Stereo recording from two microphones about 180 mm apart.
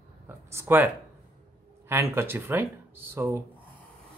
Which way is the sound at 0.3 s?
15° right (ahead or behind).